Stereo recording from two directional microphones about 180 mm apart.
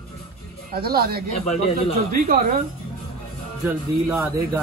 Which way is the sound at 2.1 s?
55° right (ahead or behind).